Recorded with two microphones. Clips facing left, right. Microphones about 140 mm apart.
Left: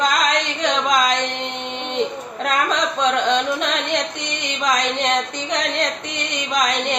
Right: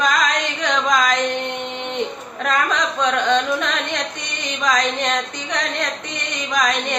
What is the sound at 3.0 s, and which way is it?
Speech, 25° left (ahead or behind).